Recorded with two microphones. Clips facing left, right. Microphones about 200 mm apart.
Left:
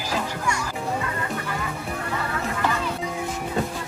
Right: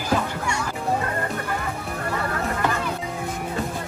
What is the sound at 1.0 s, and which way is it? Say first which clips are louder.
Music: right 2 dB; 50° right (ahead or behind).